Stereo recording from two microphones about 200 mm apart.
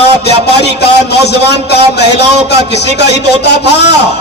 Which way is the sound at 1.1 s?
55° left (ahead or behind).